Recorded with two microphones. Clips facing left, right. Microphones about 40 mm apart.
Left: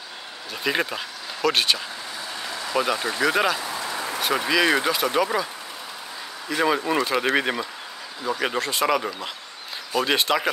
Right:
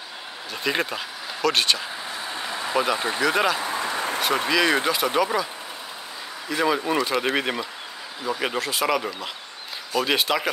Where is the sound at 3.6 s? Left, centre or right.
Right.